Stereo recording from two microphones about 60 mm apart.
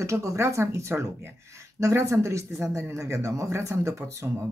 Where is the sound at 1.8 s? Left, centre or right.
Right.